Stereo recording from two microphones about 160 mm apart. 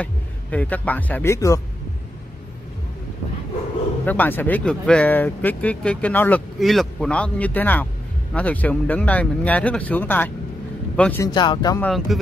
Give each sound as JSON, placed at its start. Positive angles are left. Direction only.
{"t": 0.0, "sound": "speech", "side_deg": 10}
{"t": 4.0, "sound": "a man's voice", "side_deg": 10}
{"t": 11.3, "sound": "speech", "side_deg": 30}
{"t": 11.8, "sound": "speech", "side_deg": 0}